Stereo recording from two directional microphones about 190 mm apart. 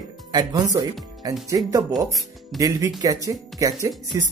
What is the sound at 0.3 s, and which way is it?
Speech, 20° right (ahead or behind).